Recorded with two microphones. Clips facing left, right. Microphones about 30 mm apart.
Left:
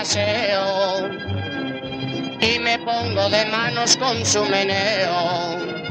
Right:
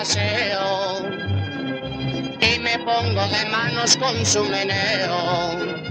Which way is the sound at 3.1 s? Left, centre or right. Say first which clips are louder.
Left 4 dB; left.